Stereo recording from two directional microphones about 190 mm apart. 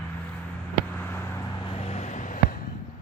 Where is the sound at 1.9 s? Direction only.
35° left (ahead or behind).